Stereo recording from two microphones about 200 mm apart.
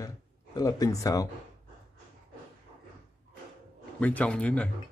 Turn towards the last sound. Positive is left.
turn(degrees=5)  # may be behind; listen again after turning